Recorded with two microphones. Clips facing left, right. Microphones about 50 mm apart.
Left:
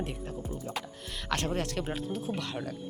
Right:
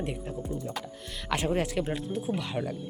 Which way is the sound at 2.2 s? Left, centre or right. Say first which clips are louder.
Right 3 dB; centre.